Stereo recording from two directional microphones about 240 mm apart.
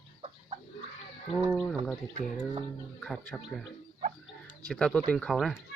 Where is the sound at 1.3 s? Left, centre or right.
Centre.